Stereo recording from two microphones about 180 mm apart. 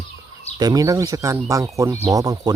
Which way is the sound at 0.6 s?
20° right (ahead or behind).